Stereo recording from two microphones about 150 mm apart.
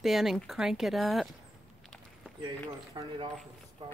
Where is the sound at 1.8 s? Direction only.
Centre (ahead or behind).